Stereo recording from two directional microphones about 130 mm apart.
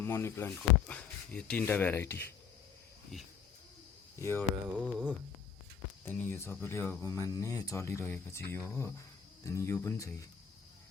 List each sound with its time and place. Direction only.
0.0 s speech: 20° left (ahead or behind)
4.2 s speech: 20° left (ahead or behind)
4.8 s a sound: 10° right (ahead or behind)
6.1 s speech: 20° left (ahead or behind)